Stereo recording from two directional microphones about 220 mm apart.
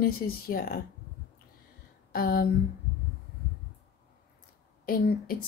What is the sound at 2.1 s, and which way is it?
Speech, 40° left (ahead or behind).